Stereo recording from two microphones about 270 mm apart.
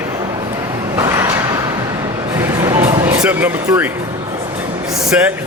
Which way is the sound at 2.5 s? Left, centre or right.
Centre.